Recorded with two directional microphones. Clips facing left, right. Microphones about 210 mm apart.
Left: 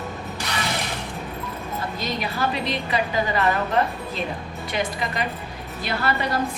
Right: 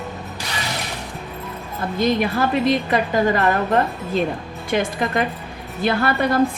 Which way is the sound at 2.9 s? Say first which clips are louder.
Right 5 dB; 50° right (ahead or behind).